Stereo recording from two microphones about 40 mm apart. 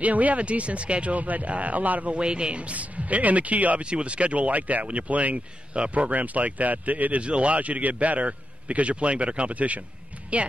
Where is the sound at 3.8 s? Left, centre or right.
Right.